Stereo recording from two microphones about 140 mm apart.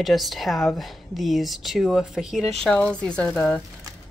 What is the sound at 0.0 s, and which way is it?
Speech, centre (ahead or behind).